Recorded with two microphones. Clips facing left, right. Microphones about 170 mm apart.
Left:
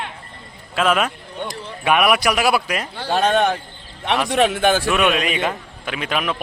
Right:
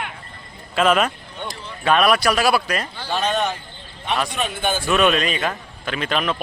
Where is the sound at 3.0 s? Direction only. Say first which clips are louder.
Left 6 dB; 50° left (ahead or behind).